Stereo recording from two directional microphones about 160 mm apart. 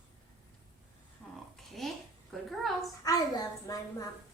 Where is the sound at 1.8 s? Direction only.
Centre (ahead or behind).